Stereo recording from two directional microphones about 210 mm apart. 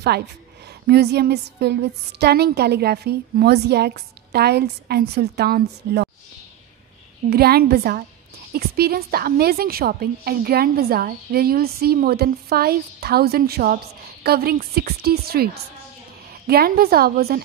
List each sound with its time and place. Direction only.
0.8 s a woman's voice: 50° right (ahead or behind)
7.2 s a woman's voice: 45° right (ahead or behind)